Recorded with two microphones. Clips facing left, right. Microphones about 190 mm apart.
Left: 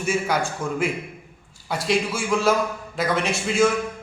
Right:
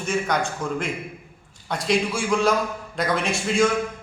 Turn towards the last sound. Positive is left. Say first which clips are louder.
# left 1 dB
turn(degrees=0)  # may be behind; listen again after turning